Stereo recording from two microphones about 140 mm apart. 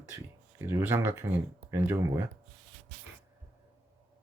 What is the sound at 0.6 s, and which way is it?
Speech, 15° right (ahead or behind).